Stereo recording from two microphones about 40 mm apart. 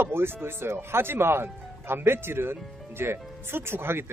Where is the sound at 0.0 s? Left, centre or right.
Right.